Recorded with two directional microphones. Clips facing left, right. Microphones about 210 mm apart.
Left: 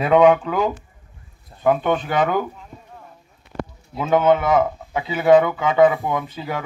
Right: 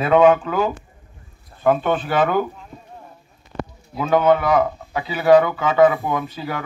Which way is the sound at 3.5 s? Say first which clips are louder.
Even; 45° left (ahead or behind).